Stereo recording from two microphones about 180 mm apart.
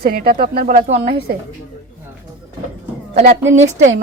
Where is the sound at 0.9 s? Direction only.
30° right (ahead or behind).